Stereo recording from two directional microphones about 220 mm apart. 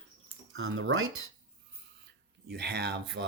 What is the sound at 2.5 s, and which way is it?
Speech, 50° right (ahead or behind).